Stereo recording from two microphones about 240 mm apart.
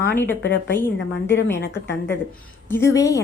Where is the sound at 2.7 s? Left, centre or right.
Centre.